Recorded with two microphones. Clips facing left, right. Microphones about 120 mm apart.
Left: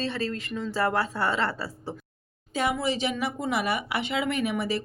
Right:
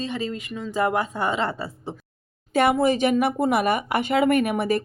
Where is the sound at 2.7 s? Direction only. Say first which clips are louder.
Right 8 dB; 50° right (ahead or behind).